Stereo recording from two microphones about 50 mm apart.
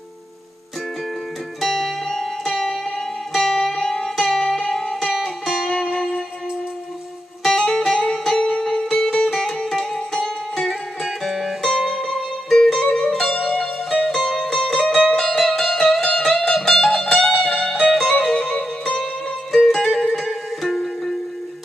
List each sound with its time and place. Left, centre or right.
1.6 s music: centre
5.7 s music: centre
7.8 s music: centre
13.3 s music: left
13.8 s music: centre
19.5 s music: centre